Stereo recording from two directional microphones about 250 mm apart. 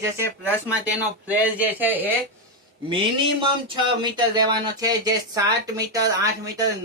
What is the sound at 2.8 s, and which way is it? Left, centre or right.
A man's voice, centre.